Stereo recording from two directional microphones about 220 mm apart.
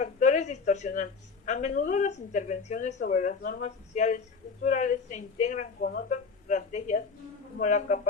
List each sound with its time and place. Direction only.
0.0 s speech: 35° left (ahead or behind)